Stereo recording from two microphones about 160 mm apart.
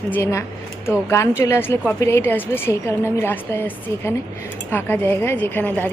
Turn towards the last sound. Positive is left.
turn(degrees=10)  # may be behind; listen again after turning